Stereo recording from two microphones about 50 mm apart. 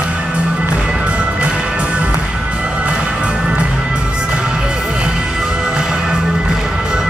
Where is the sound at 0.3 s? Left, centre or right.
Right.